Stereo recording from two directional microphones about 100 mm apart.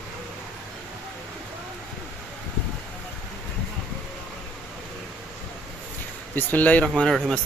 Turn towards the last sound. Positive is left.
turn(degrees=5)  # may be behind; listen again after turning